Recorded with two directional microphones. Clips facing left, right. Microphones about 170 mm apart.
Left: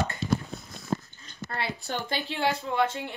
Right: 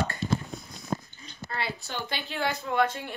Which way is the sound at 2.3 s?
30° left (ahead or behind).